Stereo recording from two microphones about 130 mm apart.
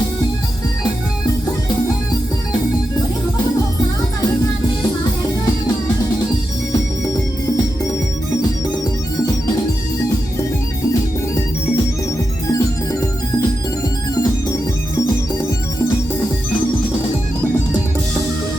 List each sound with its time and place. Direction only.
12.5 s music: 25° left (ahead or behind)